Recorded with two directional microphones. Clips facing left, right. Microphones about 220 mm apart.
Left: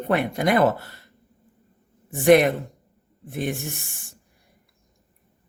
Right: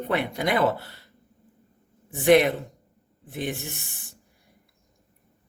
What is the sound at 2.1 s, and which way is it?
Speech, 50° left (ahead or behind).